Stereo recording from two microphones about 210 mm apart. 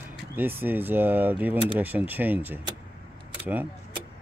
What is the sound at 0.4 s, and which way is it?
Speech, 10° right (ahead or behind).